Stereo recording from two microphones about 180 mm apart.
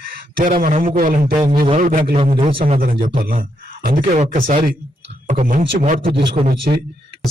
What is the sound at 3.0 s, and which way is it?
Speech, 50° right (ahead or behind).